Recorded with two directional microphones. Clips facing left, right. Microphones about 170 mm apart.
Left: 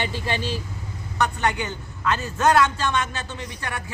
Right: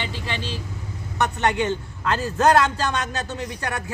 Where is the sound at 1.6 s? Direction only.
35° right (ahead or behind).